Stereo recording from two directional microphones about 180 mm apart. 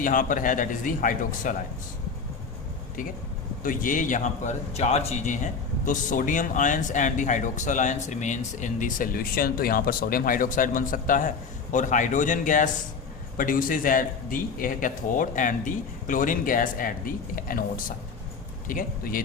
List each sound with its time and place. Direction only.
0.0 s a man's voice: 50° left (ahead or behind)
3.6 s a man's voice: 50° left (ahead or behind)